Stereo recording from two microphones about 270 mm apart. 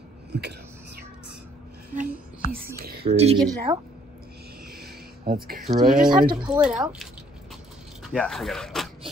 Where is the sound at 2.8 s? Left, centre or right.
Right.